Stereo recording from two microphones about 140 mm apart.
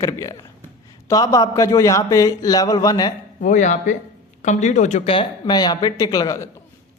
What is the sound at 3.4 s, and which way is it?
Speech, 60° left (ahead or behind).